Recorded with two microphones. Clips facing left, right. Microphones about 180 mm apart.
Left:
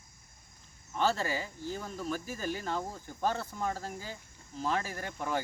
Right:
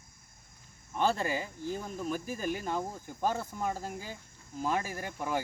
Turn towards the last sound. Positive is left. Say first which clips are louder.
# right 1 dB
turn(degrees=-10)  # may be behind; listen again after turning